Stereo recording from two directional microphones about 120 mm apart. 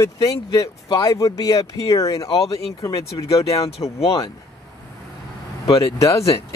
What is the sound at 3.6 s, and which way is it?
Speech, 60° left (ahead or behind).